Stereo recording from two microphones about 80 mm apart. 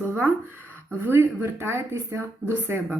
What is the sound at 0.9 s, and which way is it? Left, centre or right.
Speech, right.